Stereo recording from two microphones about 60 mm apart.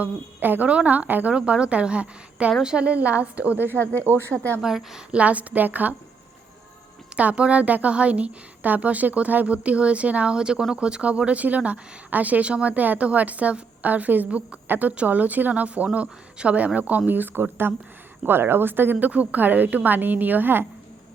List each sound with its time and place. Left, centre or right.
0.0 s a woman's voice: right
1.3 s speech: centre
4.0 s a woman's voice: right
4.6 s a woman's voice: centre
5.1 s speech: right
7.2 s a woman's voice: right